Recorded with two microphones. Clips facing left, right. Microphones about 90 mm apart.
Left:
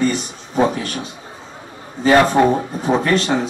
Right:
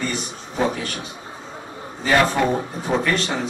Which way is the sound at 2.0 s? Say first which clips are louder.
Left 6 dB; 25° left (ahead or behind).